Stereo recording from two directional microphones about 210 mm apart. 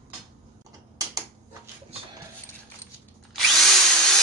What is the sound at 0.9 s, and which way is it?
Typing, 15° right (ahead or behind).